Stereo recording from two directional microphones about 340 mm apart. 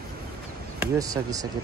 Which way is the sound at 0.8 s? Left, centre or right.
Centre.